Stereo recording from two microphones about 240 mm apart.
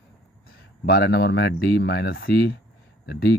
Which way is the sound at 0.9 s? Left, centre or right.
Left.